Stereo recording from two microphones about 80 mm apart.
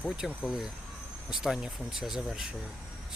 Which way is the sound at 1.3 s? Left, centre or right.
Centre.